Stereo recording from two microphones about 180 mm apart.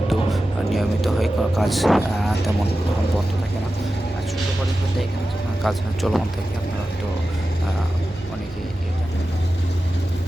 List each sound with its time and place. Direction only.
0.1 s speech: centre (ahead or behind)
5.6 s speech: centre (ahead or behind)